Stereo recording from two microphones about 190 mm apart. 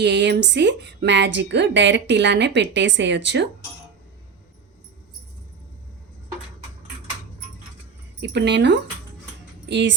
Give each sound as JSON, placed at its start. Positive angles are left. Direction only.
{"t": 0.0, "sound": "a woman's voice", "side_deg": -65}
{"t": 8.2, "sound": "speech", "side_deg": -65}